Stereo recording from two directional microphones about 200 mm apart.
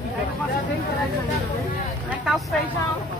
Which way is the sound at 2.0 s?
Centre (ahead or behind).